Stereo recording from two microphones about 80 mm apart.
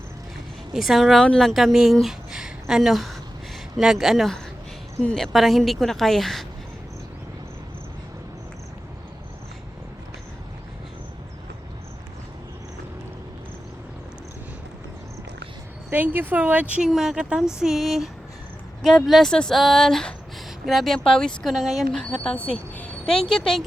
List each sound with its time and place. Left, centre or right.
0.7 s speech: centre
15.9 s speech: right
16.9 s speech: centre
22.2 s speech: centre